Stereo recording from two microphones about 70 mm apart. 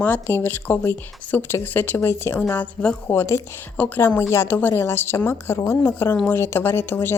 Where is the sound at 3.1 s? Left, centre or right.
Left.